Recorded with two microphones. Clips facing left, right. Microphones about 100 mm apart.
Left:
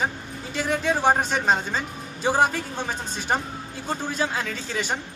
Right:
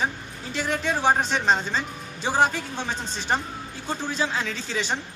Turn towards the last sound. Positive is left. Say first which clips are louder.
# even
turn(degrees=5)  # may be behind; listen again after turning